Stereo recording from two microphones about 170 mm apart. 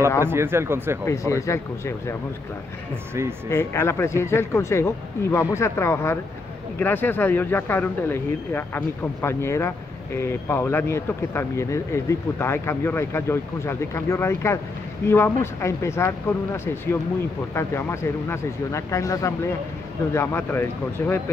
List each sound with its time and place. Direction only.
0.2 s speech: 15° right (ahead or behind)
1.0 s speech: 15° left (ahead or behind)
3.4 s speech: 15° left (ahead or behind)